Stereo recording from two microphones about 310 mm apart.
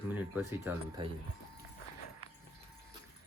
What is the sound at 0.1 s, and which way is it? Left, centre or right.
Speech, centre.